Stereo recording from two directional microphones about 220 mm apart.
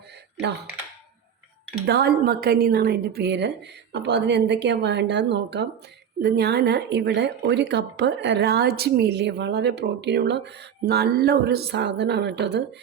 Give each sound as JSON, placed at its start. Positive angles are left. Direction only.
{"t": 1.9, "sound": "speech", "side_deg": -45}